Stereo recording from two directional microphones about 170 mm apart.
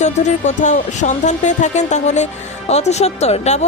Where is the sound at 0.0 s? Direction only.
45° left (ahead or behind).